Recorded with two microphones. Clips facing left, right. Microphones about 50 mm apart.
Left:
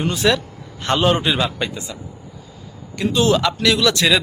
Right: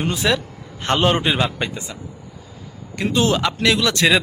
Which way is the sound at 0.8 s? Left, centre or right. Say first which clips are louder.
Left 1 dB; right.